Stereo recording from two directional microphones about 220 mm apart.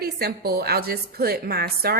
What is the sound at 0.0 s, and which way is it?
A woman's voice, 45° right (ahead or behind).